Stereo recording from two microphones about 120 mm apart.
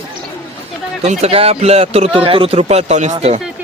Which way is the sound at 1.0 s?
60° right (ahead or behind).